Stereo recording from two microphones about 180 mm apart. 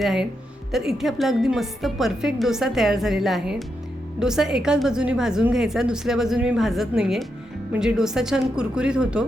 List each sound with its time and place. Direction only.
0.0 s a woman's voice: centre (ahead or behind)